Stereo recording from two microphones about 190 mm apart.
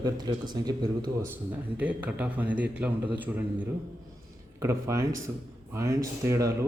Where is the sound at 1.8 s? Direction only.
10° right (ahead or behind).